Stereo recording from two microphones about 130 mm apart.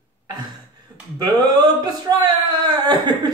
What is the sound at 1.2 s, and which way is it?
A woman's voice, 35° right (ahead or behind).